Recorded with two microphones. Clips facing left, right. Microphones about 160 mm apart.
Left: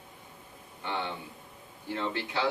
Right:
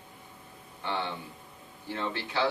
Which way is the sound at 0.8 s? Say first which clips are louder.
Right 1 dB; 15° left (ahead or behind).